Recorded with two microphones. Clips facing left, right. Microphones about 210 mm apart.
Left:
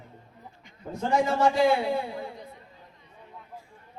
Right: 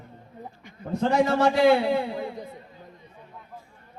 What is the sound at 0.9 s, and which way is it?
A man's voice, 70° right (ahead or behind).